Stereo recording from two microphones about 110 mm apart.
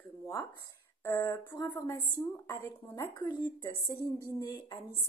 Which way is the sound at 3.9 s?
30° left (ahead or behind).